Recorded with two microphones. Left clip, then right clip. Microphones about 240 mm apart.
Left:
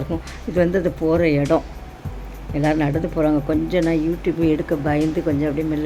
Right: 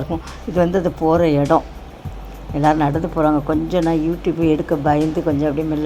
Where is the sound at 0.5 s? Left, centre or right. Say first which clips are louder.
Right 2 dB; centre.